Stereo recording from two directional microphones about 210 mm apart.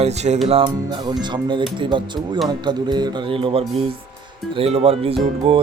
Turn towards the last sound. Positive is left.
turn(degrees=-25)  # may be behind; listen again after turning